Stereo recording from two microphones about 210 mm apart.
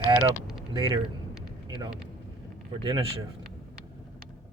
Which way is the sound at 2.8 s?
20° right (ahead or behind).